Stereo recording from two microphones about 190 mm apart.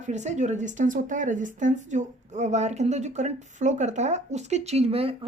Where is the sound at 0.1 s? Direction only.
40° right (ahead or behind).